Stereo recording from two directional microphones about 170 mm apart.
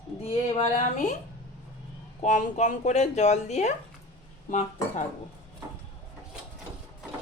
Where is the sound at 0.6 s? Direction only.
45° left (ahead or behind).